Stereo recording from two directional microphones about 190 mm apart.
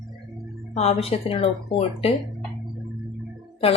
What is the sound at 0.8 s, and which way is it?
A woman's voice, 30° left (ahead or behind).